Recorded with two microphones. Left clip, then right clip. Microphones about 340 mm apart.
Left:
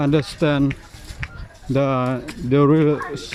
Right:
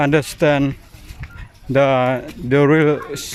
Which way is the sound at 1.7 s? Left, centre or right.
Right.